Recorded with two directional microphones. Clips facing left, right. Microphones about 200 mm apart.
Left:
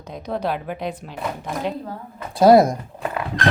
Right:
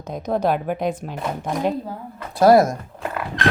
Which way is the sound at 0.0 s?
45° right (ahead or behind).